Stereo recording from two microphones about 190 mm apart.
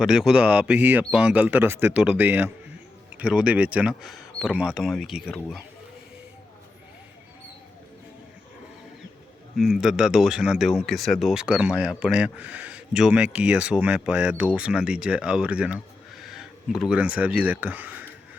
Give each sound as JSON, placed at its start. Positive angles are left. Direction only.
{"t": 0.0, "sound": "a man's voice", "side_deg": -5}
{"t": 9.6, "sound": "a man's voice", "side_deg": 0}
{"t": 16.2, "sound": "a sound", "side_deg": 0}
{"t": 16.9, "sound": "speech", "side_deg": -5}